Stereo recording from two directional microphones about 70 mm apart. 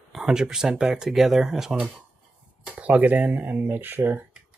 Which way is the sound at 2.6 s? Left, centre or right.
Centre.